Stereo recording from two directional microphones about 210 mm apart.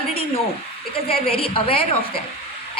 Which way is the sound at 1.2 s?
25° left (ahead or behind).